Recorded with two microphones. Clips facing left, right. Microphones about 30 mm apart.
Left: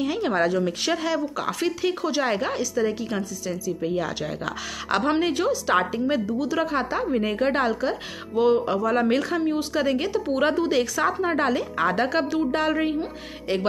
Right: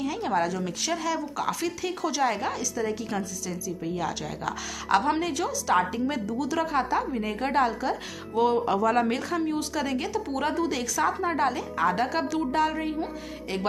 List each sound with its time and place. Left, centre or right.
0.0 s speech: left
2.8 s a woman's voice: centre
5.9 s a woman's voice: centre
8.7 s speech: centre
9.1 s a woman's voice: left